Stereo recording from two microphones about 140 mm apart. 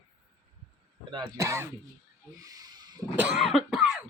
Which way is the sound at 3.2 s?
10° right (ahead or behind).